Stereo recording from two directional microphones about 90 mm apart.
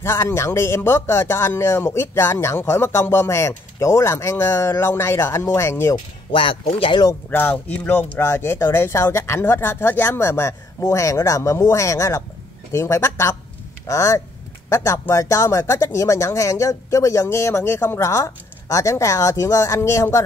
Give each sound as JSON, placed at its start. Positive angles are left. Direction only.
{"t": 0.0, "sound": "speech", "side_deg": 30}
{"t": 6.3, "sound": "speech", "side_deg": 75}
{"t": 7.2, "sound": "speech", "side_deg": 20}
{"t": 8.2, "sound": "speech", "side_deg": 30}